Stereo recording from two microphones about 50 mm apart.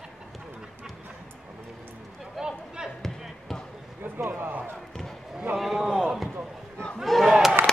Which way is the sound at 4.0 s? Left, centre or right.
Right.